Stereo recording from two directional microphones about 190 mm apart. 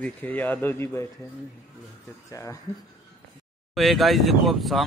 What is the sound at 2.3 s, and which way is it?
Speech, 15° left (ahead or behind).